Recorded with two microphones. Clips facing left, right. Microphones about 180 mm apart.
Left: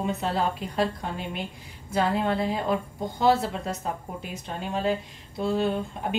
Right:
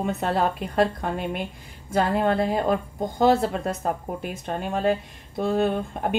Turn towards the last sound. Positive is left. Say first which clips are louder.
# right 3 dB
turn(degrees=-55)  # may be behind; listen again after turning